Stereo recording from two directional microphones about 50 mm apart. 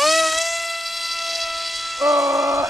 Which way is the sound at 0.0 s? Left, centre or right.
Centre.